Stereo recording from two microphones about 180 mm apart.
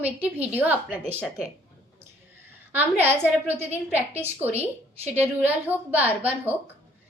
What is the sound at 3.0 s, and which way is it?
A woman's voice, 10° right (ahead or behind).